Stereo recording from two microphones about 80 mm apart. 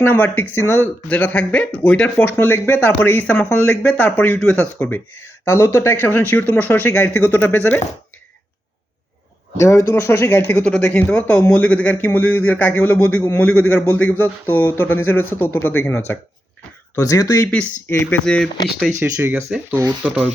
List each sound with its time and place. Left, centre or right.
0.0 s speech: left
4.4 s speech: centre
4.6 s speech: left
9.6 s speech: left
10.5 s speech: centre; by 16.1 s left
17.1 s speech: left
17.8 s speech: left
18.9 s speech: centre
20.0 s speech: centre